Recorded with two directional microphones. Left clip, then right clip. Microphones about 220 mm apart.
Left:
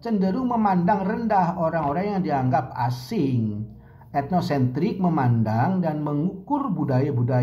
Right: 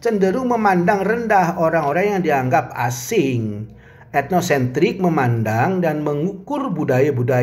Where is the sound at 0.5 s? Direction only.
60° right (ahead or behind).